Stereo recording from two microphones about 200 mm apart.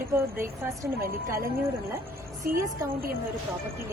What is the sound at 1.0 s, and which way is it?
Speech, 45° right (ahead or behind).